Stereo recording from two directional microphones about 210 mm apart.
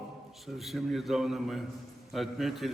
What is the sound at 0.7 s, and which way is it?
A man's voice, centre (ahead or behind).